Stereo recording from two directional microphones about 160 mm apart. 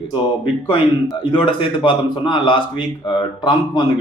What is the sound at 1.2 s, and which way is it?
A man's voice, 30° left (ahead or behind).